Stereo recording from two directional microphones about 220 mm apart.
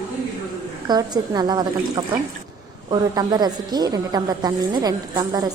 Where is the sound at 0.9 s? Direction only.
15° right (ahead or behind).